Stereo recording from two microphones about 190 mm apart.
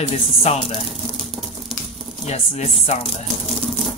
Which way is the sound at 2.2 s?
35° left (ahead or behind).